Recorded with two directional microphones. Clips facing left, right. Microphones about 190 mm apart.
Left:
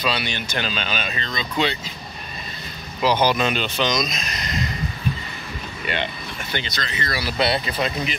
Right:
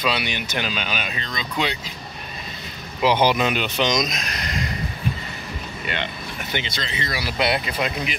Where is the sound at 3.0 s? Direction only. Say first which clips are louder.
Right 1 dB; 25° right (ahead or behind).